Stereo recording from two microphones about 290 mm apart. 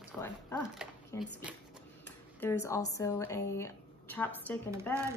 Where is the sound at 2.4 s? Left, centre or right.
Centre.